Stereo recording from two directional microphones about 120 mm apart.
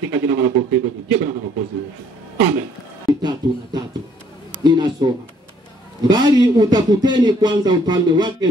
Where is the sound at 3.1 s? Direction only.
35° right (ahead or behind).